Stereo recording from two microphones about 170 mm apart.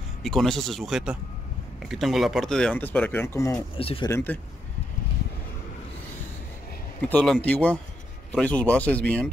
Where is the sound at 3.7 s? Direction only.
30° left (ahead or behind).